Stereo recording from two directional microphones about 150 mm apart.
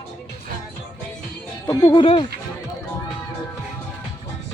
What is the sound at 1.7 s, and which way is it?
Music, 25° left (ahead or behind).